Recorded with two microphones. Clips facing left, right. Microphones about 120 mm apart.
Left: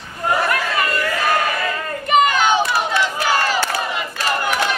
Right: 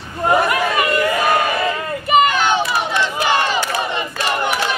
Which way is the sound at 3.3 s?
20° right (ahead or behind).